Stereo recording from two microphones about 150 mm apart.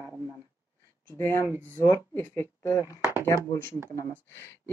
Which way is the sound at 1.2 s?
15° left (ahead or behind).